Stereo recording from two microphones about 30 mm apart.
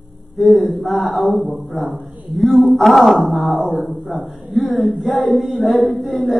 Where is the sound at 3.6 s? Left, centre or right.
Right.